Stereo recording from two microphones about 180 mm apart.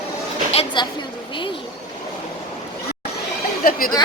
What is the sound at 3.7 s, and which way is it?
Speech, 50° left (ahead or behind).